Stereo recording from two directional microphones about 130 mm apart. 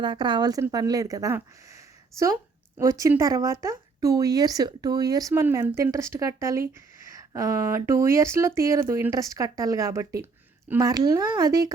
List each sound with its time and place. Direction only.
0.0 s a woman's voice: 35° right (ahead or behind)